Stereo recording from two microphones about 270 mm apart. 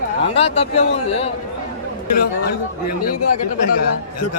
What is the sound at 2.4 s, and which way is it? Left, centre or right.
Speech, left.